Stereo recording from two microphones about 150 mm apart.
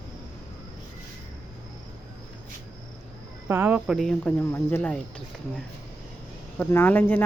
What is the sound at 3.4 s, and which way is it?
Speech, 15° right (ahead or behind).